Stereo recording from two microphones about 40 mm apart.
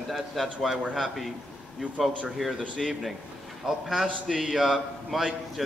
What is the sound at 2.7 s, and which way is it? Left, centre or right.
A man's voice, centre.